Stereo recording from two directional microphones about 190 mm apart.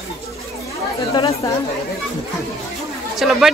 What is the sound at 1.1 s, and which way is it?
Speech, 20° left (ahead or behind).